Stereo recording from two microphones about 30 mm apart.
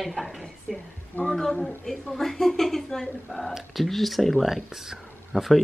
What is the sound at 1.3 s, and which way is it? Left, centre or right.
Speech, centre.